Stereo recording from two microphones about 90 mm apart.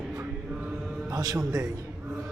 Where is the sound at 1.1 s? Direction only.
40° right (ahead or behind).